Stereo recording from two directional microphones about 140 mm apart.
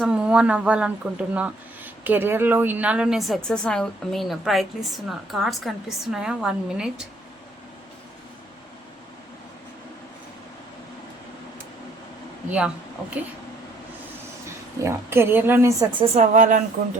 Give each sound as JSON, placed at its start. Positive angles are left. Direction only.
{"t": 0.0, "sound": "speech", "side_deg": -5}
{"t": 12.5, "sound": "a woman's voice", "side_deg": -10}
{"t": 14.8, "sound": "a woman's voice", "side_deg": -20}
{"t": 16.3, "sound": "speech", "side_deg": -60}